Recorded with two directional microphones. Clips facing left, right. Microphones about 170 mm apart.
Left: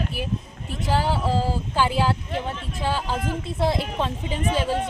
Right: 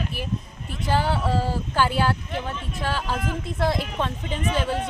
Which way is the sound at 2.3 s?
25° left (ahead or behind).